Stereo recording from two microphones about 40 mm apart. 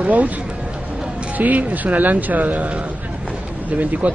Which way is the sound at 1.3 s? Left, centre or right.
Right.